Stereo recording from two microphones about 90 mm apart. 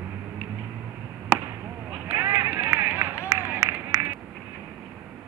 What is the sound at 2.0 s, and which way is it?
Run, 25° right (ahead or behind).